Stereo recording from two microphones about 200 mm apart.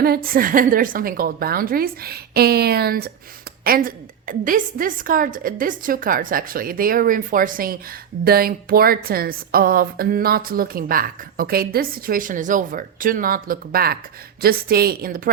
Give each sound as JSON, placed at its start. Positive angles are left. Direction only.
{"t": 0.0, "sound": "a woman's voice", "side_deg": -45}